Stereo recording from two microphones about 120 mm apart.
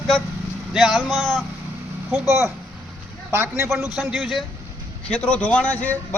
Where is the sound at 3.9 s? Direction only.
Centre (ahead or behind).